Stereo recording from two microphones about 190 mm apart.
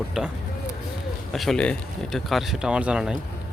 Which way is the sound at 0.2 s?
5° right (ahead or behind).